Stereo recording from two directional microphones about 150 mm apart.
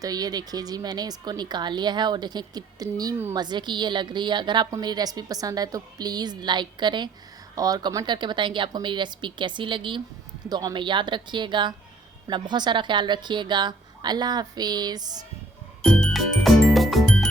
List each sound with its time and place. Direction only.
0.0 s a woman's voice: 25° right (ahead or behind)
15.8 s music: 5° left (ahead or behind)